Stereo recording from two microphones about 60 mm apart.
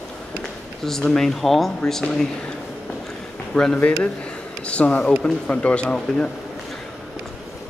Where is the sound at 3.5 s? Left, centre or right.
Centre.